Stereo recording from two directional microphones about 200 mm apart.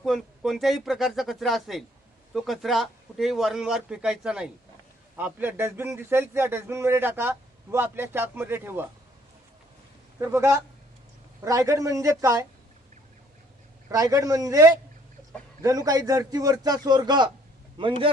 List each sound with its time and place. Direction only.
0.0 s a man's voice: centre (ahead or behind)
10.2 s a man's voice: 15° right (ahead or behind)
13.9 s a man's voice: 15° right (ahead or behind)